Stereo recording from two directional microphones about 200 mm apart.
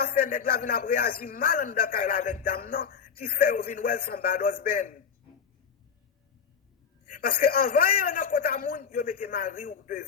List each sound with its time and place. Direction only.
0.0 s speech: 50° left (ahead or behind)
7.1 s speech: 45° left (ahead or behind)